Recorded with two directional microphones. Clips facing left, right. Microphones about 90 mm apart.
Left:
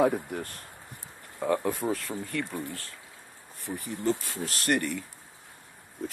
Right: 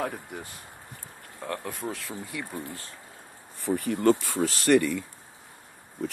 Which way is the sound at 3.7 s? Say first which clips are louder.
Right 7 dB; 65° right (ahead or behind).